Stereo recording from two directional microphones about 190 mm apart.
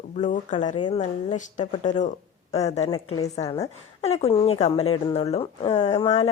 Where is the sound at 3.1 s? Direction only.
20° left (ahead or behind).